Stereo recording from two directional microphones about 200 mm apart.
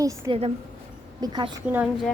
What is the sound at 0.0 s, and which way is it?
A woman's voice, 25° right (ahead or behind).